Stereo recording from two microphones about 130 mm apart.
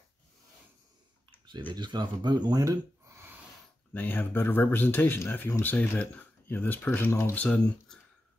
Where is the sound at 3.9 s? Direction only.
15° left (ahead or behind).